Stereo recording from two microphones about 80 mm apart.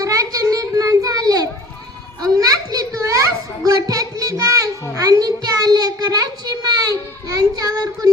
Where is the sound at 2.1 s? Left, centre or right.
Right.